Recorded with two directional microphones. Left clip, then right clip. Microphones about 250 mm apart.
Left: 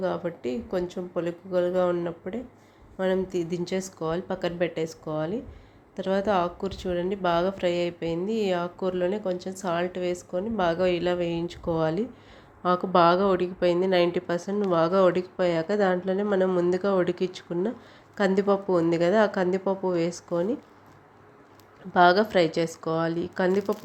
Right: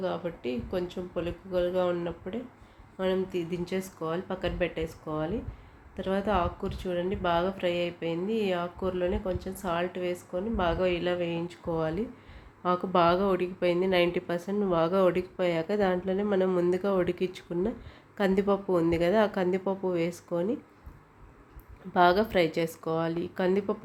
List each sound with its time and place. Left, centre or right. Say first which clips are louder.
0.0 s a woman's voice: left 3 dB; centre
21.9 s a woman's voice: left 4 dB; centre